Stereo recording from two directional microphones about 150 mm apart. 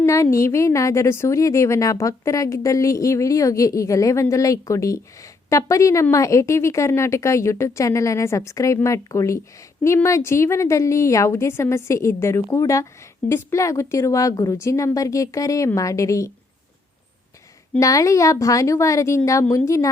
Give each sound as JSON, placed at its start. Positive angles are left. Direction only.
{"t": 0.0, "sound": "a woman's voice", "side_deg": 20}
{"t": 17.7, "sound": "a woman's voice", "side_deg": 20}